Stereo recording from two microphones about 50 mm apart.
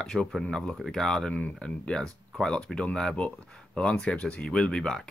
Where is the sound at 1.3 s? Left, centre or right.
Left.